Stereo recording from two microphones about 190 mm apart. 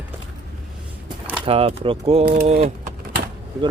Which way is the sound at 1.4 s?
30° right (ahead or behind).